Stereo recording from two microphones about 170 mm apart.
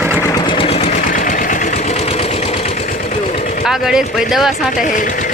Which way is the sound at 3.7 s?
5° right (ahead or behind).